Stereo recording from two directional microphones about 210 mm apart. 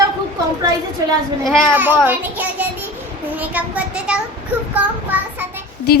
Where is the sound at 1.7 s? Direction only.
10° right (ahead or behind).